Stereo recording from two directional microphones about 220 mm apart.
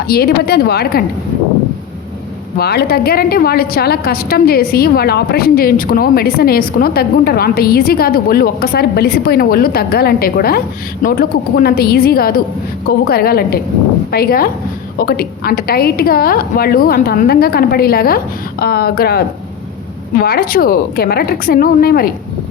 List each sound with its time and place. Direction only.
0.1 s a woman's voice: 45° left (ahead or behind)
2.6 s a woman's voice: 45° left (ahead or behind)